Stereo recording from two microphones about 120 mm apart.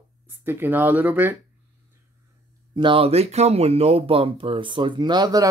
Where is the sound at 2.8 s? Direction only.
45° right (ahead or behind).